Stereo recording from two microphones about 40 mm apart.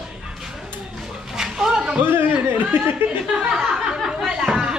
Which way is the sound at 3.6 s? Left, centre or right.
Centre.